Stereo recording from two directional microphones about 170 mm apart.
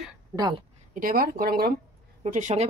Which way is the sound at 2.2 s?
45° right (ahead or behind).